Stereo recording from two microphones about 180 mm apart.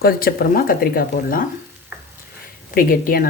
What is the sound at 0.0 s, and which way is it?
Speech, 55° left (ahead or behind).